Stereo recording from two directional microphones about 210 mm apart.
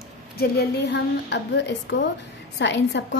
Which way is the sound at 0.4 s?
50° left (ahead or behind).